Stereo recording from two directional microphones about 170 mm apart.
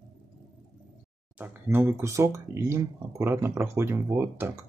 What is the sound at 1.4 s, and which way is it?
Speech, 10° right (ahead or behind).